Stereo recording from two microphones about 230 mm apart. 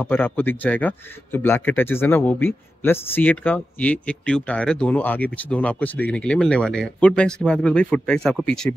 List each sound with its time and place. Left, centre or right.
0.0 s speech: centre